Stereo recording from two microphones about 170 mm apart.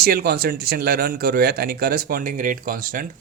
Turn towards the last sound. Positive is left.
turn(degrees=-55)  # may be behind; listen again after turning